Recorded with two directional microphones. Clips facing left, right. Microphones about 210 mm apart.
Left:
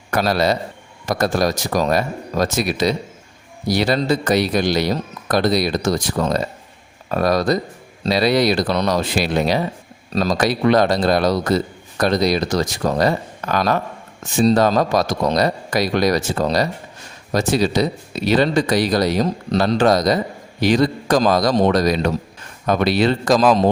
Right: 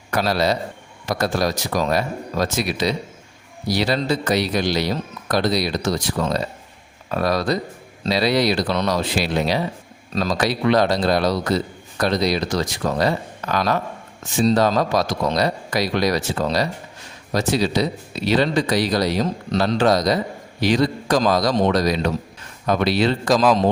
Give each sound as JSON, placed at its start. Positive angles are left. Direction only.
{"t": 0.1, "sound": "a man's voice", "side_deg": 50}